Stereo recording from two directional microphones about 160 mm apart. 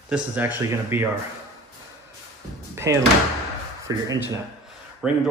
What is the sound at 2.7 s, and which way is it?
Door, 15° right (ahead or behind).